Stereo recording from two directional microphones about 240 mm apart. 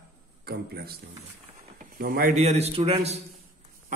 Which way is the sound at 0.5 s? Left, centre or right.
Right.